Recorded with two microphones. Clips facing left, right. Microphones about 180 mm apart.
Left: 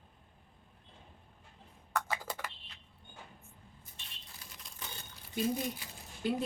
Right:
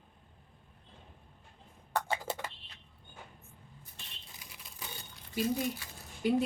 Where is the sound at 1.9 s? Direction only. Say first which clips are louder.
Right 3 dB; 30° right (ahead or behind).